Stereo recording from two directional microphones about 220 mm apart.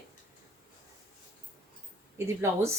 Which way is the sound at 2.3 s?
10° right (ahead or behind).